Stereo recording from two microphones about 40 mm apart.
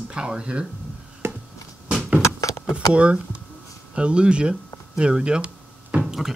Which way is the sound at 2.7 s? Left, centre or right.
Right.